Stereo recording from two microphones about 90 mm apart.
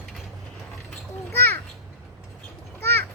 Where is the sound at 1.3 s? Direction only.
25° left (ahead or behind).